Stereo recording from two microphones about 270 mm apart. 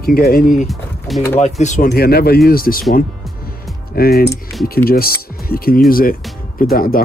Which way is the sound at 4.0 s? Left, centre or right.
Left.